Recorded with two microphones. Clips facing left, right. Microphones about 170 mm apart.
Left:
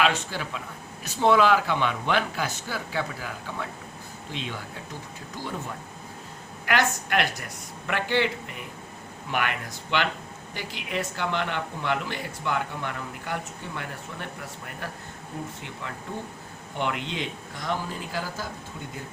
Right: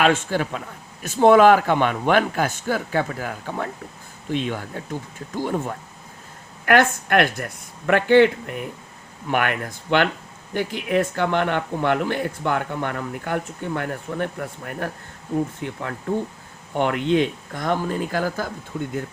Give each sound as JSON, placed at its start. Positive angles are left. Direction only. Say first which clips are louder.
{"t": 0.0, "sound": "speech", "louder": "right 6 dB", "side_deg": -50}
{"t": 16.7, "sound": "speech", "louder": "right 10 dB", "side_deg": -55}